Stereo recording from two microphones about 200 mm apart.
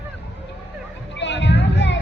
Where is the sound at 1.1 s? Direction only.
60° left (ahead or behind).